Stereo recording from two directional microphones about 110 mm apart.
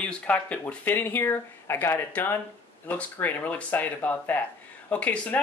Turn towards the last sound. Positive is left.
turn(degrees=15)  # may be behind; listen again after turning